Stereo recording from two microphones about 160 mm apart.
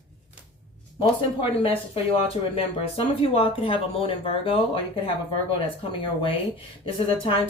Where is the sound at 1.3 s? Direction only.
35° left (ahead or behind).